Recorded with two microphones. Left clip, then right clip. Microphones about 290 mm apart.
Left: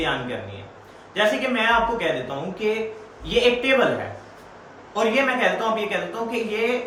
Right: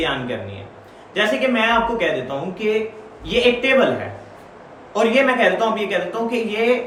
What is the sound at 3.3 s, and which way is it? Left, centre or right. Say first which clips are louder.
Speech: right 3 dB; centre.